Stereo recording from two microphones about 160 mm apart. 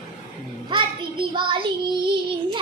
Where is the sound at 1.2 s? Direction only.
30° right (ahead or behind).